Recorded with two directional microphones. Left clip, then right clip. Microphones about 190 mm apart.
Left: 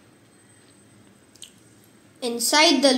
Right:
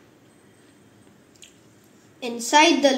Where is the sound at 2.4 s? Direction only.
Centre (ahead or behind).